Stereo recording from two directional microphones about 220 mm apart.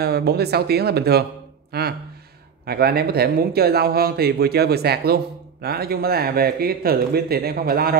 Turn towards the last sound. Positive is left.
turn(degrees=-45)  # may be behind; listen again after turning